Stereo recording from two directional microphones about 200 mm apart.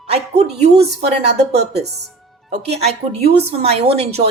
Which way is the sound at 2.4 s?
30° right (ahead or behind).